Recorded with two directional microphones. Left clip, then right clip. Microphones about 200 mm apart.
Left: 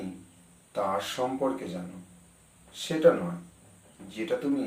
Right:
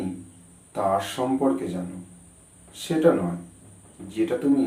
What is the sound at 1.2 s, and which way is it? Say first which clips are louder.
Speech: right 4 dB; centre (ahead or behind).